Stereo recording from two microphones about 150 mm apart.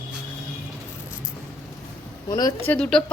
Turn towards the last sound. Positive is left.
turn(degrees=5)  # may be behind; listen again after turning